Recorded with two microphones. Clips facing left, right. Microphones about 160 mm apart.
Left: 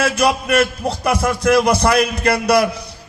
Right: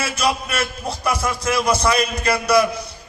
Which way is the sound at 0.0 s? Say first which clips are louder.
Left 5 dB; 60° left (ahead or behind).